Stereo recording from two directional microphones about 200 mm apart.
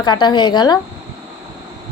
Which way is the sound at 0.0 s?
20° left (ahead or behind).